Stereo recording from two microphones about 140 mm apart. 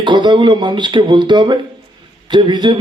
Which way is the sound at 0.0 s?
35° right (ahead or behind).